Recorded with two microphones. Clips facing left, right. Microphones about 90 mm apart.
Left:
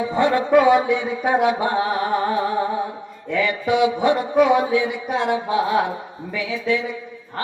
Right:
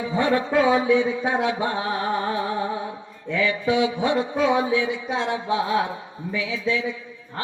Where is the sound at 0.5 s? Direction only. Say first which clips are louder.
Left 4 dB; 65° left (ahead or behind).